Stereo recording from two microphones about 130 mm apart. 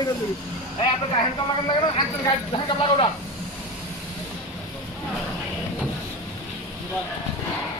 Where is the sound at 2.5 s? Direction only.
40° left (ahead or behind).